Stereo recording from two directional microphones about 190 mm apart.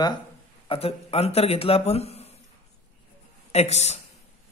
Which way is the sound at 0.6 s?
30° left (ahead or behind).